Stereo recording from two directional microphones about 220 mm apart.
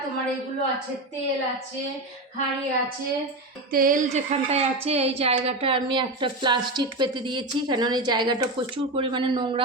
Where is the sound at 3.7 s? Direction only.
40° right (ahead or behind).